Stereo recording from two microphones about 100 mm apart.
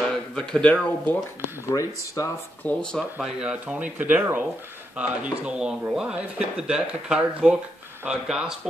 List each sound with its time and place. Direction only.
0.3 s speech: 10° left (ahead or behind)
1.7 s speech: 35° left (ahead or behind)
2.6 s speech: 10° left (ahead or behind)
3.2 s speech: 5° right (ahead or behind)